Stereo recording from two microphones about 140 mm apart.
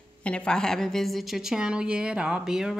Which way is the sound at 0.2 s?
10° left (ahead or behind).